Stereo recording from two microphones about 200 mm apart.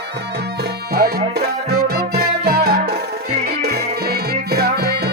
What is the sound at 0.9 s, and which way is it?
Music, 50° right (ahead or behind).